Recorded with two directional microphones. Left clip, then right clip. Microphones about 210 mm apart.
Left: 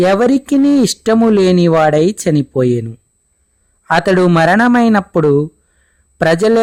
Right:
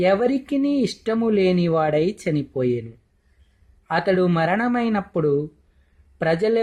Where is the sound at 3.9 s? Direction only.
50° left (ahead or behind).